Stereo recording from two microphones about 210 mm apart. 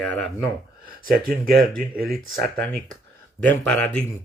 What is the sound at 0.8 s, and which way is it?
Speech, 40° right (ahead or behind).